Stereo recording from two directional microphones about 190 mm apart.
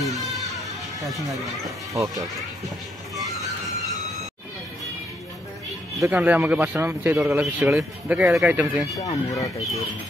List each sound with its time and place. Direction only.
0.0 s music: centre (ahead or behind)
5.9 s speech: 10° right (ahead or behind)
8.9 s speech: 15° left (ahead or behind)